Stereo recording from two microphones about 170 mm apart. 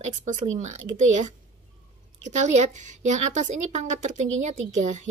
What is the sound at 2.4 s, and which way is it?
A woman's voice, 45° right (ahead or behind).